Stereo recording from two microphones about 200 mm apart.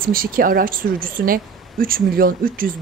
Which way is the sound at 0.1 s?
45° right (ahead or behind).